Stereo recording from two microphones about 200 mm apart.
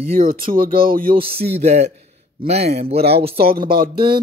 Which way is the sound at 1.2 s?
30° right (ahead or behind).